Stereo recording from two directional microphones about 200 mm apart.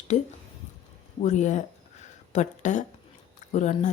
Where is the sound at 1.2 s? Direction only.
35° left (ahead or behind).